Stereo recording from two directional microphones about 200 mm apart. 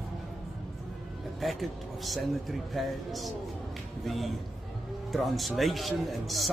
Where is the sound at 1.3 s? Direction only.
Centre (ahead or behind).